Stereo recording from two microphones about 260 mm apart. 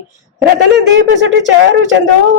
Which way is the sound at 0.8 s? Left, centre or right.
Right.